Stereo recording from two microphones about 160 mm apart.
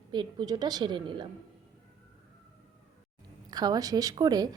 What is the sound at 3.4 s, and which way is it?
A woman's voice, 25° right (ahead or behind).